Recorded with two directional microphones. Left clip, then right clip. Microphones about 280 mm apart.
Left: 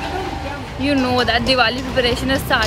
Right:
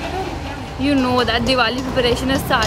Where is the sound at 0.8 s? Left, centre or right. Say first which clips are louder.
Even; centre.